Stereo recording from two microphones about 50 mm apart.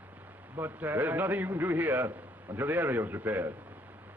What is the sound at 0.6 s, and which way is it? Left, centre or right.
A man's voice, right.